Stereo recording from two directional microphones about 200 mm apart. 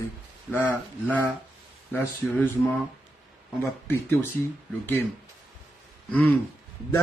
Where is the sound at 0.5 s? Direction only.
10° left (ahead or behind).